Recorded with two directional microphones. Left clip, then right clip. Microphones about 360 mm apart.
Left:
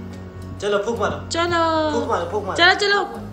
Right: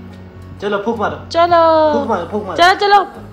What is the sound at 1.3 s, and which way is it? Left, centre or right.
Speech, centre.